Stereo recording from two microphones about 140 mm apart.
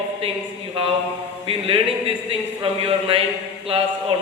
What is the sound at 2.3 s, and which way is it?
Speech, 40° right (ahead or behind).